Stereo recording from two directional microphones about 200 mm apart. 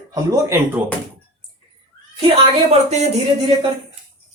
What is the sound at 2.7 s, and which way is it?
Speech, 35° right (ahead or behind).